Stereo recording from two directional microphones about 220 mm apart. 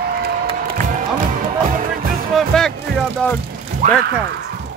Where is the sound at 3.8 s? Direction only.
35° right (ahead or behind).